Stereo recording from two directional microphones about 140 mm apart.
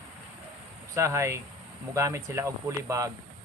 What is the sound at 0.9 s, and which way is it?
Speech, 20° right (ahead or behind).